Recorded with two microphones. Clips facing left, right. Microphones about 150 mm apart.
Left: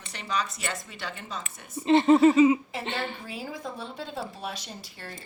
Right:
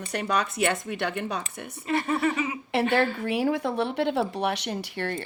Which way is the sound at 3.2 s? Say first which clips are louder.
Right 12 dB; 70° right (ahead or behind).